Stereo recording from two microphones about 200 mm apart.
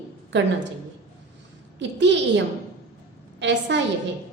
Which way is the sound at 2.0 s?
60° right (ahead or behind).